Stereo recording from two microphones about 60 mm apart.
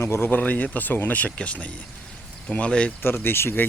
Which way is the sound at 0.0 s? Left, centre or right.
Left.